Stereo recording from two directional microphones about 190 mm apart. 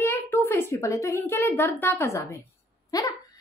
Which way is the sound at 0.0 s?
10° left (ahead or behind).